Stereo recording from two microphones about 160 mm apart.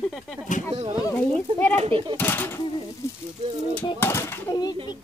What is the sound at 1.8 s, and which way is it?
Speech, 35° right (ahead or behind).